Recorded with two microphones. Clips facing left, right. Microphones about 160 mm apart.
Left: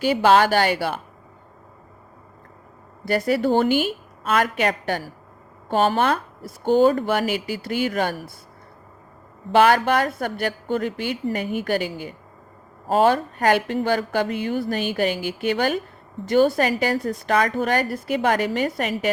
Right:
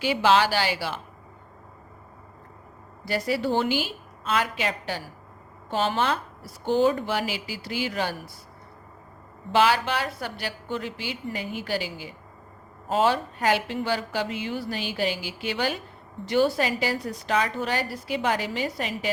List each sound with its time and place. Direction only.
0.0 s a woman's voice: 45° left (ahead or behind)
3.0 s a woman's voice: 55° left (ahead or behind)
9.5 s a woman's voice: 55° left (ahead or behind)